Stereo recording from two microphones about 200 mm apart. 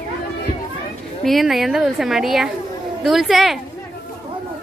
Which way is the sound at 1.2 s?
Centre (ahead or behind).